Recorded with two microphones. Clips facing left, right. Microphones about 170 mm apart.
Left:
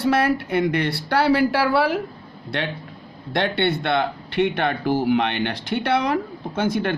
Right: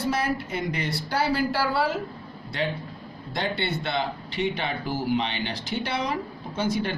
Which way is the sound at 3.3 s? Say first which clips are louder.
Left 7 dB; 65° left (ahead or behind).